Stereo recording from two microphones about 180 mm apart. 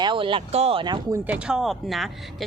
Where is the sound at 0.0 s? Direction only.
25° right (ahead or behind).